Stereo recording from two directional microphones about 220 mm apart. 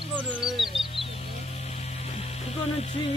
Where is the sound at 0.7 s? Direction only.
25° left (ahead or behind).